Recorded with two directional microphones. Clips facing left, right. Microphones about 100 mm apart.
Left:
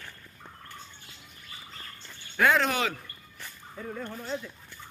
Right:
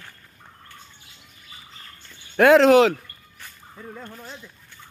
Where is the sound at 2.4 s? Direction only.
90° right.